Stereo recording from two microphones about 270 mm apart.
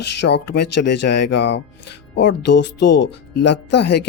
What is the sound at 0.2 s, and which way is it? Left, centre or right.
Speech, left.